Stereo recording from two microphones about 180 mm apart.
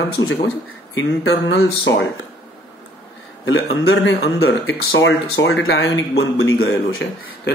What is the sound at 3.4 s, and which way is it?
Speech, 90° left.